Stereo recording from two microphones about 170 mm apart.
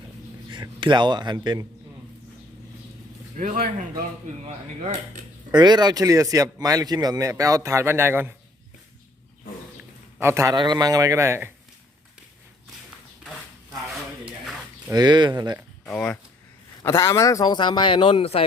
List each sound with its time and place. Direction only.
0.5 s speech: 25° right (ahead or behind)
3.3 s speech: 50° right (ahead or behind)
5.5 s speech: 25° right (ahead or behind)
10.2 s speech: 15° right (ahead or behind)
14.8 s speech: 25° right (ahead or behind)
15.9 s speech: 5° left (ahead or behind)
16.8 s a man's voice: 20° left (ahead or behind); by 18.4 s 35° left (ahead or behind)